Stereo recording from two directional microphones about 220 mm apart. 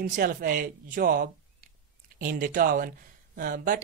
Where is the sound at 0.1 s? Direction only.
40° right (ahead or behind).